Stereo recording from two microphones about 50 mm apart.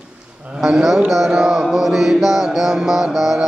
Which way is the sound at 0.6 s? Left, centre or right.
Centre.